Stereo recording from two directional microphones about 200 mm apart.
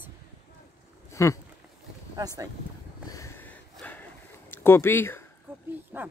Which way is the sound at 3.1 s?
15° left (ahead or behind).